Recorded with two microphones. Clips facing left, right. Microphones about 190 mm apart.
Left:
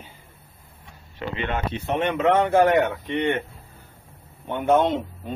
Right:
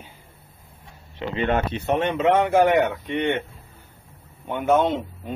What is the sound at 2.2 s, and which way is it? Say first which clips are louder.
Speech: even; 10° right (ahead or behind).